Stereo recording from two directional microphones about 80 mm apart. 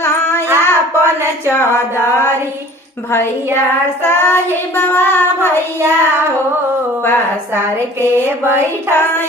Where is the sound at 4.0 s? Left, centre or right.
Left.